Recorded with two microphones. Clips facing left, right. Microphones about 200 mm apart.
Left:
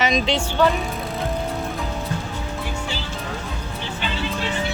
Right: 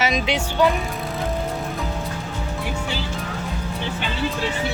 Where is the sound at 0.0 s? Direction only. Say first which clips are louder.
Left 1 dB; 10° right (ahead or behind).